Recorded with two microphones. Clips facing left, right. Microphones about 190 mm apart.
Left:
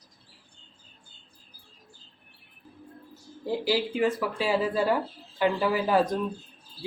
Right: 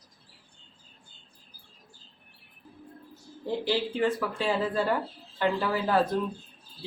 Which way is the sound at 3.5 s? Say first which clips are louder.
Left 2 dB; 10° left (ahead or behind).